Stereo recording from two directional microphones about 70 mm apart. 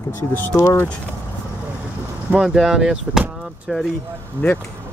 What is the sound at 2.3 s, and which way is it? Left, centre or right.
Speech, centre.